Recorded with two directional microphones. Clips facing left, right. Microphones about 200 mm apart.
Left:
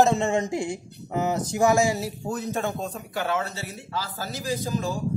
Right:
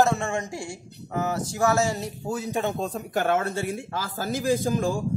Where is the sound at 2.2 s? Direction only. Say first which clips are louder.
Right 2 dB; 10° right (ahead or behind).